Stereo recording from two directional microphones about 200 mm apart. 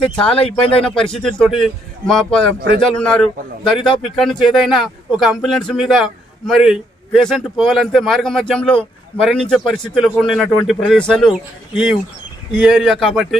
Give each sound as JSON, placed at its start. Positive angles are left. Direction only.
{"t": 0.0, "sound": "speech", "side_deg": 25}
{"t": 0.9, "sound": "speech", "side_deg": 5}